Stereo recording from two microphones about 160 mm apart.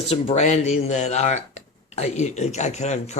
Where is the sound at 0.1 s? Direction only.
40° left (ahead or behind).